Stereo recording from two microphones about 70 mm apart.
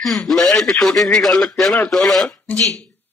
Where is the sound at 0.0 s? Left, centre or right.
Centre.